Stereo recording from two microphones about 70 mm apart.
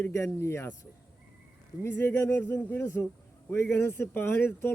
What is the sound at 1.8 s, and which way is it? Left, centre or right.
Speech, left.